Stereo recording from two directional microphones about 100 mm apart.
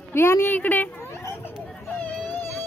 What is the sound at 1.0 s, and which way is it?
Hubbub, 25° left (ahead or behind).